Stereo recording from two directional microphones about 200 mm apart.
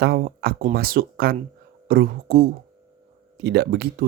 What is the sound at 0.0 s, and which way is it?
Speech, 50° right (ahead or behind).